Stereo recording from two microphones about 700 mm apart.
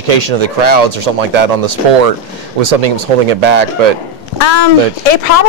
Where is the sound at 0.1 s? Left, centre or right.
Right.